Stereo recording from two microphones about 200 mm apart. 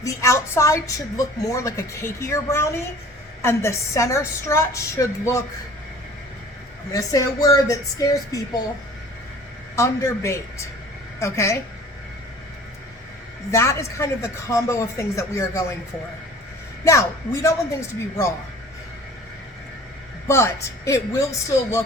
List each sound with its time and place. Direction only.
0.0 s a woman's voice: 15° left (ahead or behind)
6.9 s a woman's voice: 15° left (ahead or behind)
9.7 s a woman's voice: 15° left (ahead or behind)
13.5 s a woman's voice: 15° left (ahead or behind)
16.8 s a woman's voice: 15° left (ahead or behind)
20.2 s a woman's voice: 15° left (ahead or behind)